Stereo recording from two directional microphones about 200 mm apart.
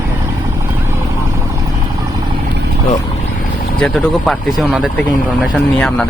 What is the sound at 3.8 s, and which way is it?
Speech, 5° left (ahead or behind).